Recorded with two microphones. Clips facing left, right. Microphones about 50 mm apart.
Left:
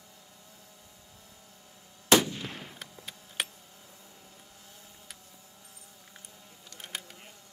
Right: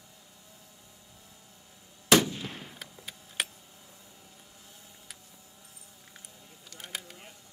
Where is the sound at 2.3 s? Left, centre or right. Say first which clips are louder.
Even; left.